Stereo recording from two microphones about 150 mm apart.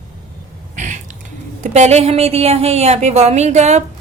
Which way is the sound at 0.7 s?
55° right (ahead or behind).